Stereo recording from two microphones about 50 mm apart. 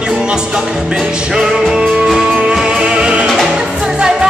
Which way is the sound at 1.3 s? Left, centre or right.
Centre.